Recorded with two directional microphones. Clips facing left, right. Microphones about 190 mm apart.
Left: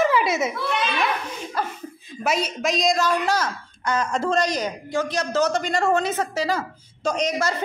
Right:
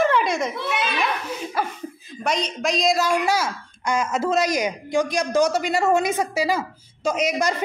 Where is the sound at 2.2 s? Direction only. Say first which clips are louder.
Even; 5° left (ahead or behind).